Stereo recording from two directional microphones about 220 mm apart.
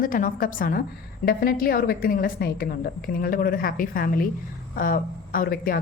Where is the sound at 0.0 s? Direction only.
40° left (ahead or behind).